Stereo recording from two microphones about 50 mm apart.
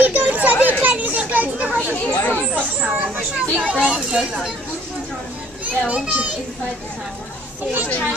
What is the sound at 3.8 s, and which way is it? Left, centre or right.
Speech, centre.